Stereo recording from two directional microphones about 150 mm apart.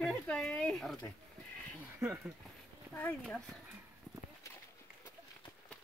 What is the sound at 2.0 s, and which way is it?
Dishes, 10° right (ahead or behind).